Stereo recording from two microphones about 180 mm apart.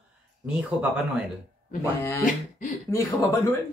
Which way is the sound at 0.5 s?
5° right (ahead or behind).